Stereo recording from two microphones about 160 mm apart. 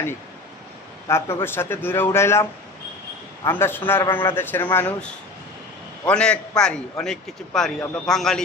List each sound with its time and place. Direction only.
1.0 s a man's voice: 15° left (ahead or behind)